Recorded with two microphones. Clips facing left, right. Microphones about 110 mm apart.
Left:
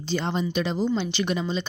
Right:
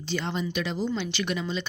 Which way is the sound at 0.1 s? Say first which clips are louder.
Left 3 dB; 30° left (ahead or behind).